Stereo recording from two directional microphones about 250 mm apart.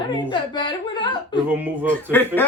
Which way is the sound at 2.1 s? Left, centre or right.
Centre.